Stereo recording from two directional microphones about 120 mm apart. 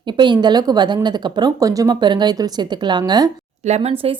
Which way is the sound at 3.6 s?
65° right (ahead or behind).